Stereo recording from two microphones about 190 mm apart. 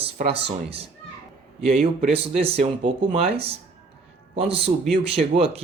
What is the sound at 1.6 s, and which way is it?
Speech, 35° right (ahead or behind).